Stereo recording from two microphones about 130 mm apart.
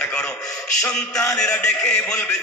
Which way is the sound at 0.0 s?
5° left (ahead or behind).